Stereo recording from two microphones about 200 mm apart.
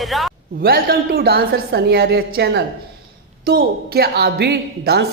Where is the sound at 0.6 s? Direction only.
50° right (ahead or behind).